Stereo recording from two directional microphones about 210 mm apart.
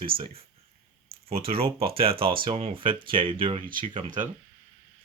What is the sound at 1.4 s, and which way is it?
Speech, 25° right (ahead or behind).